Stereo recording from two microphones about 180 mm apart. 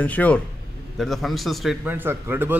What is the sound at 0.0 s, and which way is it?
A man's voice, 10° left (ahead or behind).